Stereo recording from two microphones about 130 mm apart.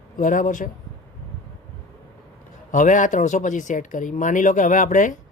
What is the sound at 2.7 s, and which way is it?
Speech, 75° left (ahead or behind).